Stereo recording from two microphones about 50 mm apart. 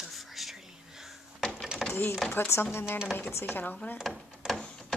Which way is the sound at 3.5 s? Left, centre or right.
Left.